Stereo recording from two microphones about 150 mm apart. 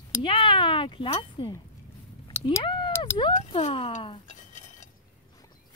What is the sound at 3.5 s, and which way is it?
Speech, 35° left (ahead or behind).